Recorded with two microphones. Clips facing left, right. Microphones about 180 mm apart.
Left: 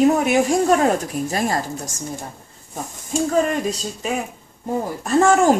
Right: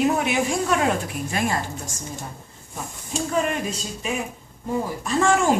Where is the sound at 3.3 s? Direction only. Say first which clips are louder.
Left 3 dB; 40° left (ahead or behind).